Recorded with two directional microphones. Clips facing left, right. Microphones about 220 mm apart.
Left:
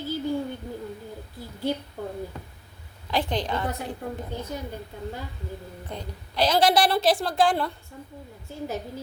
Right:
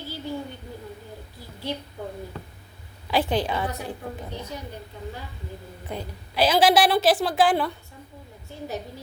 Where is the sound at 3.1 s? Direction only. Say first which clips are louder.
Right 3 dB; 5° right (ahead or behind).